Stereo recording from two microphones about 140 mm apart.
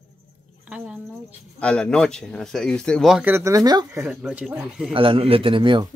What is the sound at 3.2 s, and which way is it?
Speech, 20° right (ahead or behind).